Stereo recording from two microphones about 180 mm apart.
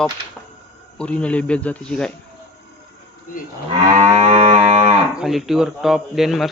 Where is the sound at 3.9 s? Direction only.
40° right (ahead or behind).